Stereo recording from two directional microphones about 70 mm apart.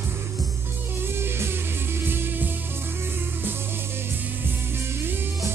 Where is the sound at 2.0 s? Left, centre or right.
Right.